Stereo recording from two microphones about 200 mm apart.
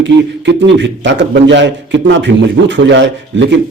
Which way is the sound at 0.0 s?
60° right (ahead or behind).